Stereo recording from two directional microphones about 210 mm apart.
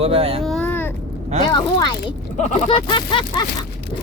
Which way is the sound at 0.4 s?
5° left (ahead or behind).